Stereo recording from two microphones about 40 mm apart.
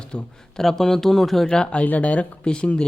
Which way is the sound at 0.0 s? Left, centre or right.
Left.